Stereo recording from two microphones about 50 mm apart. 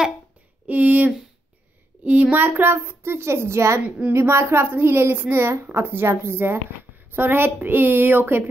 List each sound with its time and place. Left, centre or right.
0.7 s a sound: right
2.0 s child singing: right
2.4 s a child's voice: right